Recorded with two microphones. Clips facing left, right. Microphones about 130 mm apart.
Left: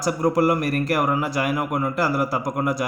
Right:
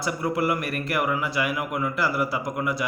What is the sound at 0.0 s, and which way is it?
Speech, 40° left (ahead or behind).